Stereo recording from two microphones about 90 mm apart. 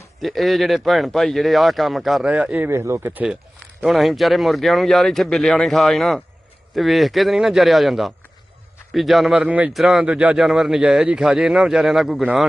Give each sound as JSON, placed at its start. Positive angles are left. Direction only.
{"t": 0.2, "sound": "speech", "side_deg": 0}
{"t": 2.2, "sound": "speech", "side_deg": -15}
{"t": 2.6, "sound": "speech", "side_deg": -30}
{"t": 3.8, "sound": "speech", "side_deg": 0}